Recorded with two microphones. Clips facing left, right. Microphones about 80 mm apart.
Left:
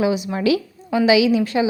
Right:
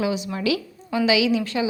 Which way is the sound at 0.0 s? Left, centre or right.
Left.